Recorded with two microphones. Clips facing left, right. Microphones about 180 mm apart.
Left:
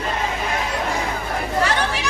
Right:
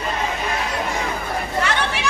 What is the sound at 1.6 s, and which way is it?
Chatter, 40° left (ahead or behind).